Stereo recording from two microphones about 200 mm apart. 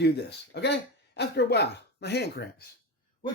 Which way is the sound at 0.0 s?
55° left (ahead or behind).